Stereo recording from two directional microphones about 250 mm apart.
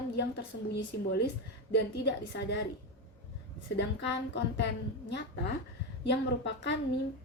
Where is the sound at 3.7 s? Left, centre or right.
Left.